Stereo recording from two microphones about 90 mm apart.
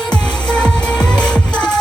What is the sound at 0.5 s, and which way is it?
Music, 10° left (ahead or behind).